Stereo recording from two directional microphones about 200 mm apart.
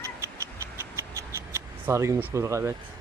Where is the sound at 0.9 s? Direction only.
15° right (ahead or behind).